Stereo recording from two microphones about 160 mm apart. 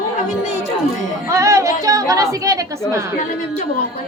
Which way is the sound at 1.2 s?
20° right (ahead or behind).